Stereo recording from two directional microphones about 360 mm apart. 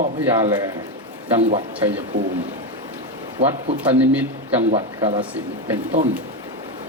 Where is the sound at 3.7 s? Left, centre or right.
Centre.